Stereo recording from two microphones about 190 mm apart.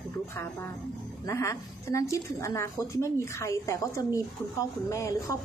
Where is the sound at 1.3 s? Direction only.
15° left (ahead or behind).